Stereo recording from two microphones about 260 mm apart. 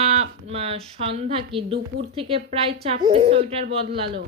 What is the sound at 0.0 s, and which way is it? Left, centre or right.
Speech, right.